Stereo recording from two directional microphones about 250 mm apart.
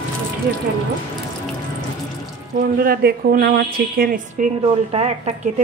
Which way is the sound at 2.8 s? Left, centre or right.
Right.